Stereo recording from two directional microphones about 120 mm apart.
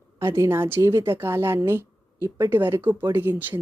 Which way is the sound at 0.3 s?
25° right (ahead or behind).